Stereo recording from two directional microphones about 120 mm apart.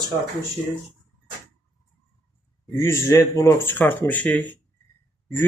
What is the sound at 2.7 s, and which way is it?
Speech, 20° left (ahead or behind).